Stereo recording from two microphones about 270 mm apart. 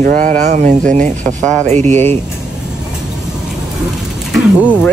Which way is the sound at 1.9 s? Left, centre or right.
Centre.